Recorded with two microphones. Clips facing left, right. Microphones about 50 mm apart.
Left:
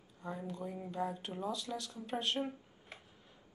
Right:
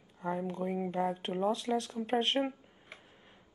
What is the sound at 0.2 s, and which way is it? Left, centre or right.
Speech, right.